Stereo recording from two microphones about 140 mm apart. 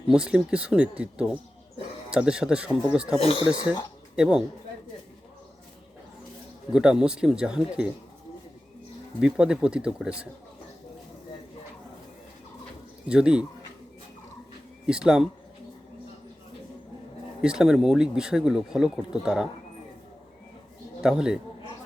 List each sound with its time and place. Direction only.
0.1 s speech: 5° right (ahead or behind)
3.2 s speech: 40° left (ahead or behind)
4.1 s speech: 5° right (ahead or behind)
6.7 s speech: 5° right (ahead or behind)
9.2 s speech: 5° right (ahead or behind)
13.1 s speech: 5° right (ahead or behind)
14.8 s speech: 5° right (ahead or behind)
17.4 s speech: 5° right (ahead or behind)
21.0 s speech: 5° right (ahead or behind)